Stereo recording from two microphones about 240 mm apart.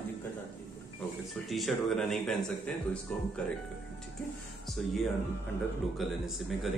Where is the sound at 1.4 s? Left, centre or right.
Centre.